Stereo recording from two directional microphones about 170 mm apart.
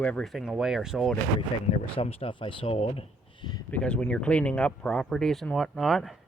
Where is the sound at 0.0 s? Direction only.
5° left (ahead or behind).